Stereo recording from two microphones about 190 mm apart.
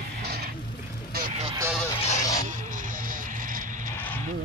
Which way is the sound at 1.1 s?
35° right (ahead or behind).